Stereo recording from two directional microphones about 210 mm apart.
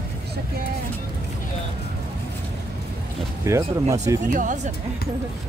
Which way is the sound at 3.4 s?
15° right (ahead or behind).